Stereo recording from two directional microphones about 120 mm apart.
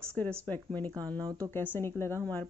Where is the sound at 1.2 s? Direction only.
30° right (ahead or behind).